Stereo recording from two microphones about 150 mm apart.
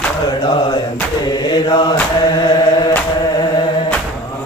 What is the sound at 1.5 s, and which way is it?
Mantra, 30° left (ahead or behind).